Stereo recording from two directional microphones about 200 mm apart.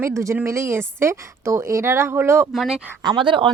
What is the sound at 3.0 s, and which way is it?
Speech, 20° right (ahead or behind).